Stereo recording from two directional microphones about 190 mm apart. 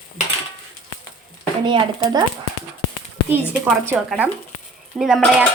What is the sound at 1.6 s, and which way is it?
Speech, 25° right (ahead or behind).